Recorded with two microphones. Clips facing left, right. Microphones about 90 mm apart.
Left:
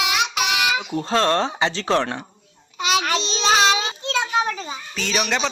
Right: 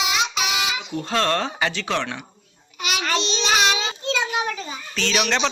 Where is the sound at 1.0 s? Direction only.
30° left (ahead or behind).